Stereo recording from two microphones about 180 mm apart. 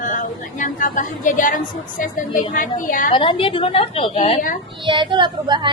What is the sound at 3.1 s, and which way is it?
A woman's voice, 30° left (ahead or behind).